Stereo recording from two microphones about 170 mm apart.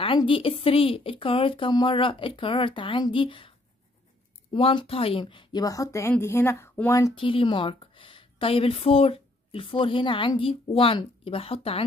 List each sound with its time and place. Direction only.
0.0 s speech: 30° left (ahead or behind)
4.6 s a woman's voice: 35° left (ahead or behind)
7.2 s a woman's voice: 30° left (ahead or behind)